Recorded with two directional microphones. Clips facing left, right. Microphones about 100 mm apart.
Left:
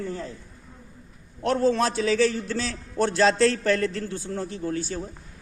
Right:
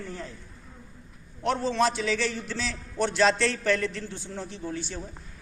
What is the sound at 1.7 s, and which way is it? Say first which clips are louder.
A man's voice: left 2 dB; 45° left (ahead or behind).